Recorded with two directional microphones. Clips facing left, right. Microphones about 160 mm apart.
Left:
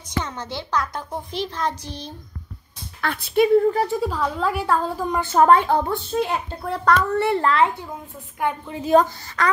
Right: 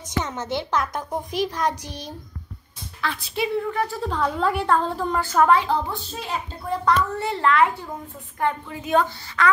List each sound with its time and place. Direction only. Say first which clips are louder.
0.2 s a child's voice: right 3 dB; 20° right (ahead or behind)
3.0 s a child's voice: left 7 dB; 55° left (ahead or behind)
4.0 s a woman's voice: even; 5° left (ahead or behind)
5.4 s a child's voice: left 3 dB; 50° left (ahead or behind)
7.4 s speech: right 4 dB; 30° left (ahead or behind)
8.4 s a woman's voice: even; 15° left (ahead or behind)
8.8 s a woman's voice: left 5 dB; 40° left (ahead or behind)